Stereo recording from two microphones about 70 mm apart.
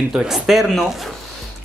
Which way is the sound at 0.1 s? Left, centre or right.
Centre.